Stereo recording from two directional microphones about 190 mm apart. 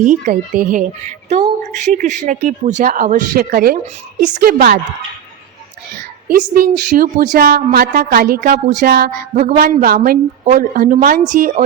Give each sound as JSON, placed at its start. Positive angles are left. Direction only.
{"t": 0.0, "sound": "a woman's voice", "side_deg": -40}
{"t": 6.5, "sound": "a woman's voice", "side_deg": -50}